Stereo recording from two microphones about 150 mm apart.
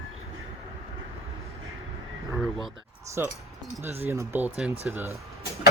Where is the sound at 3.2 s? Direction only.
15° right (ahead or behind).